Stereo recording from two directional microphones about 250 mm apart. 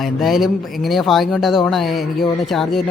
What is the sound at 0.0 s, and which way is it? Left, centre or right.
Speech, centre.